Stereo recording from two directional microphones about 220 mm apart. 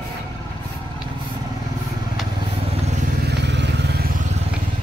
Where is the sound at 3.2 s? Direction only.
50° right (ahead or behind).